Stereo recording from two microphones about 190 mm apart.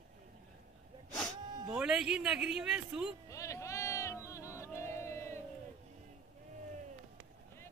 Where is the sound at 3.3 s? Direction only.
15° left (ahead or behind).